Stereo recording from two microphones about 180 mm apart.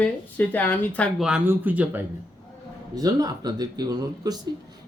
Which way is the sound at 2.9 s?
20° right (ahead or behind).